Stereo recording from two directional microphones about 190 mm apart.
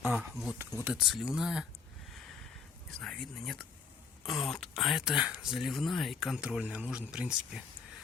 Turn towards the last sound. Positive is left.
turn(degrees=-5)  # may be behind; listen again after turning